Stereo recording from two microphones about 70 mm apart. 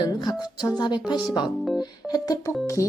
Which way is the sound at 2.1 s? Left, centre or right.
Left.